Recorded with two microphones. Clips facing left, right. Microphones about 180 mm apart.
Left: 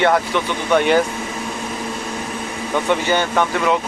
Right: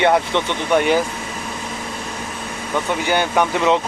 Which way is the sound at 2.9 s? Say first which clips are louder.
Left 1 dB; 10° right (ahead or behind).